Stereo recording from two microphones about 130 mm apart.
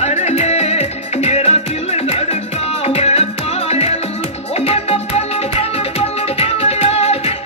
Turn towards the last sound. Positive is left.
turn(degrees=50)  # may be behind; listen again after turning